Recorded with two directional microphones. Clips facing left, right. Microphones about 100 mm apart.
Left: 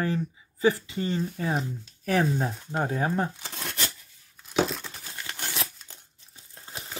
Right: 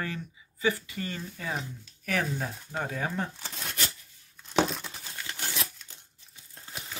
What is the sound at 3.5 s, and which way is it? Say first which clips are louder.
Tearing: left 3 dB; 85° left.